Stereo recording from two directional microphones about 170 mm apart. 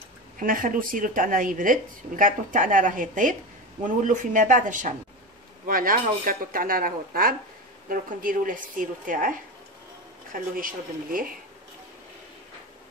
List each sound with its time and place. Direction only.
0.4 s a woman's voice: 55° right (ahead or behind)
10.3 s speech: 55° right (ahead or behind)